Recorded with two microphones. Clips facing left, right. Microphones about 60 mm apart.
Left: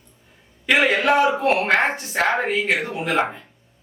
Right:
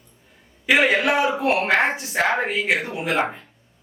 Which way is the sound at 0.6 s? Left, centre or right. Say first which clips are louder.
Even; centre.